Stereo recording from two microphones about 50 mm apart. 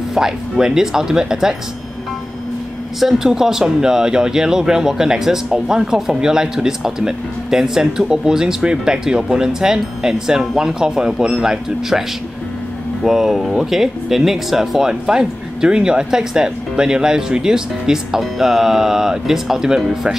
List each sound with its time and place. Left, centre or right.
0.1 s speech: centre
3.0 s speech: centre
13.0 s speech: centre